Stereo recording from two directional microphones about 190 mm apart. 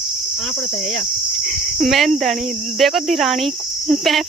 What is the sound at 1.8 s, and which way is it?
Speech, centre (ahead or behind).